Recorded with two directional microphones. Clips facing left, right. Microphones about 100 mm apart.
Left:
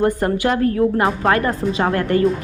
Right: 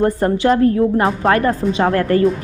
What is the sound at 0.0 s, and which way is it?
A woman's voice, 30° right (ahead or behind).